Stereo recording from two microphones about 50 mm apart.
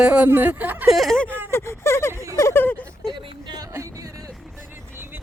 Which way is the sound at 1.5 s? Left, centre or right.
Left.